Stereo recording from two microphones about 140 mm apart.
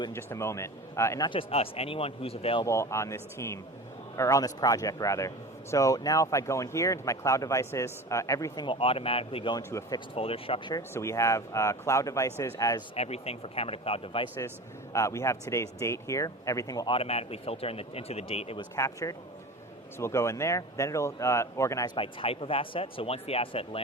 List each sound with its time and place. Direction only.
0.1 s speech: 15° left (ahead or behind)
1.3 s a man's voice: 40° left (ahead or behind)
2.6 s speech: 20° left (ahead or behind)
8.6 s speech: 40° left (ahead or behind)
9.6 s speech: 20° left (ahead or behind)
10.2 s speech: 40° left (ahead or behind)
10.8 s speech: 20° left (ahead or behind)
13.0 s a man's voice: 45° left (ahead or behind)
14.9 s speech: 20° left (ahead or behind)
16.9 s a man's voice: 45° left (ahead or behind)
18.8 s speech: 20° left (ahead or behind)
21.9 s speech: 40° left (ahead or behind)